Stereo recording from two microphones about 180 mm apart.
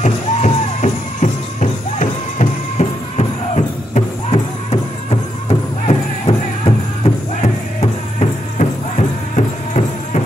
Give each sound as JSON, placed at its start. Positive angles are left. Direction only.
{"t": 0.0, "sound": "music", "side_deg": 40}